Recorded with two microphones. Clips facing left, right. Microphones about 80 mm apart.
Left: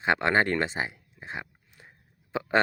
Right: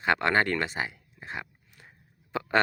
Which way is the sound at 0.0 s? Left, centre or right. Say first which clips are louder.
Left 1 dB; left.